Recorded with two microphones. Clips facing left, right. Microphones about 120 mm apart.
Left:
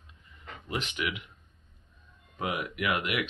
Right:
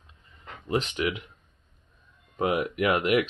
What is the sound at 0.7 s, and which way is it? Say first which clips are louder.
Speech: right 7 dB; 35° right (ahead or behind).